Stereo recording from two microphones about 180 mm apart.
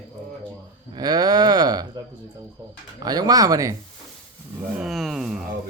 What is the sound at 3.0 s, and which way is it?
Speech, 20° right (ahead or behind).